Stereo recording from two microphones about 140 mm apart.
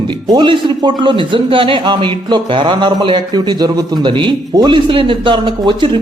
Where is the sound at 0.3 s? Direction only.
35° right (ahead or behind).